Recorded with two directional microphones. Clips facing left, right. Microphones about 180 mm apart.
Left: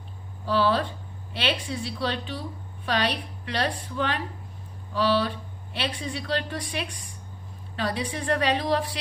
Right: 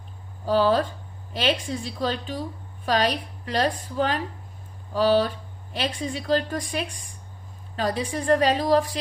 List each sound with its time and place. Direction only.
0.4 s a woman's voice: 45° right (ahead or behind)